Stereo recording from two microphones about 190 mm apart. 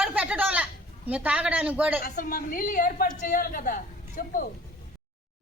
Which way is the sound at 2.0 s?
50° left (ahead or behind).